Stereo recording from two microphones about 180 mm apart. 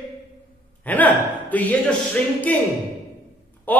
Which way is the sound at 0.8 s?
10° left (ahead or behind).